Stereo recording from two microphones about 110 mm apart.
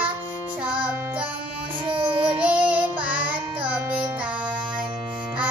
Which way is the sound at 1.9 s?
50° right (ahead or behind).